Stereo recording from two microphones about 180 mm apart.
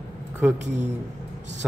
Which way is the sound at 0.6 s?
40° right (ahead or behind).